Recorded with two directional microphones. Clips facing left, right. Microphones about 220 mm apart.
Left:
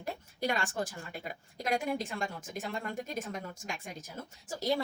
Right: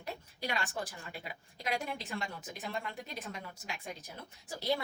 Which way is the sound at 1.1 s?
45° left (ahead or behind).